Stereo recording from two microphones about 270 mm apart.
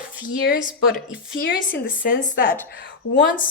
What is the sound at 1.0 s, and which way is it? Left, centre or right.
Speech, centre.